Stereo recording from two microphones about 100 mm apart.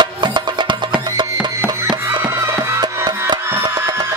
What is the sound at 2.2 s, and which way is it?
Music, 25° right (ahead or behind).